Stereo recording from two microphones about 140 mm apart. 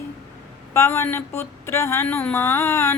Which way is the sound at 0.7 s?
20° left (ahead or behind).